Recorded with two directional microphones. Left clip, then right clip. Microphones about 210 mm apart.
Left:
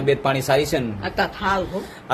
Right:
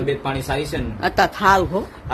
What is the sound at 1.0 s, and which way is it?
Speech, 50° right (ahead or behind).